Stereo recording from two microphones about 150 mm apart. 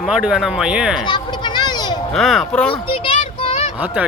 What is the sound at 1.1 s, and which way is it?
Children playing, 30° left (ahead or behind).